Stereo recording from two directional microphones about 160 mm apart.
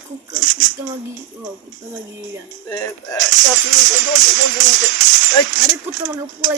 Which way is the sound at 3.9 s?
50° right (ahead or behind).